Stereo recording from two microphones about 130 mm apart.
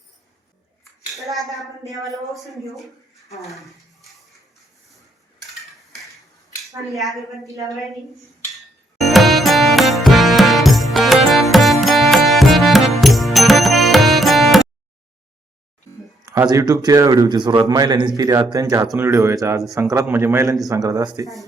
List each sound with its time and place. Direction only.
1.1 s speech: centre (ahead or behind)
3.5 s a sound: centre (ahead or behind)
7.0 s speech: centre (ahead or behind)
7.4 s speech: 25° right (ahead or behind)
9.0 s music: centre (ahead or behind)
16.2 s a man's voice: 25° right (ahead or behind)